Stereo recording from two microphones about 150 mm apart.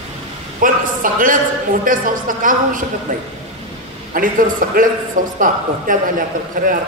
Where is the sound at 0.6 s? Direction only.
65° right (ahead or behind).